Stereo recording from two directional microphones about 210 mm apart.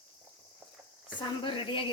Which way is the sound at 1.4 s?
25° left (ahead or behind).